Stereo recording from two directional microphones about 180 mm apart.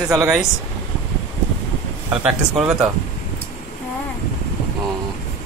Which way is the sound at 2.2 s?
5° right (ahead or behind).